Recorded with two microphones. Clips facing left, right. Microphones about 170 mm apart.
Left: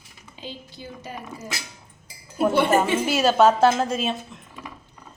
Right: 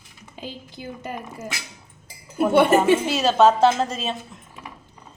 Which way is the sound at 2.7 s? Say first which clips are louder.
Right 3 dB; centre (ahead or behind).